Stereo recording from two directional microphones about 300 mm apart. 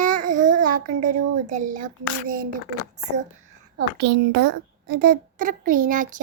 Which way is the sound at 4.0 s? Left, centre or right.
Right.